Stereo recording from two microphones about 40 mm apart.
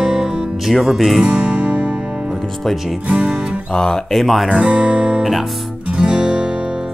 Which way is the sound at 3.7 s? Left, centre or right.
Centre.